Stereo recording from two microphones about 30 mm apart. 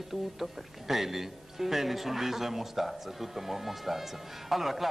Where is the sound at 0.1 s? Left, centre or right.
Centre.